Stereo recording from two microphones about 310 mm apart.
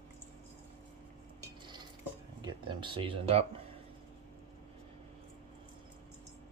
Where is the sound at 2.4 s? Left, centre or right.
Centre.